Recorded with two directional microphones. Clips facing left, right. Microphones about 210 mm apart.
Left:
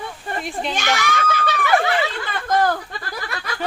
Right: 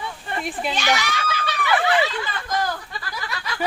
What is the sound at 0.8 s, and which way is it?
Speech, 50° left (ahead or behind).